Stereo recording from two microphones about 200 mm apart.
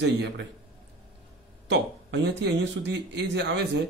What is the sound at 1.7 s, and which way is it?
A man's voice, 60° right (ahead or behind).